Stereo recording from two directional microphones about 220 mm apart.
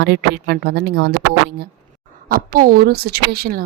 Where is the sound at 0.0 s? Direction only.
45° right (ahead or behind).